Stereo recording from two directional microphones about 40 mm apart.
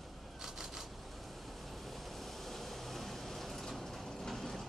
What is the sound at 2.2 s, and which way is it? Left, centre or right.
Vehicle, centre.